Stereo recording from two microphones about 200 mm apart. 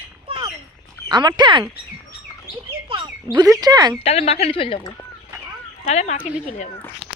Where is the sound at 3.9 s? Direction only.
30° left (ahead or behind).